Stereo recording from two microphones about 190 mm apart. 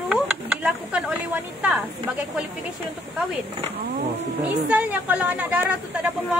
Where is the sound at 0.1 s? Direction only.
5° right (ahead or behind).